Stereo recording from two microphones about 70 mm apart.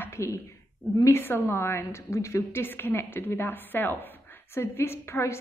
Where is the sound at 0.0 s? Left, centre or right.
Left.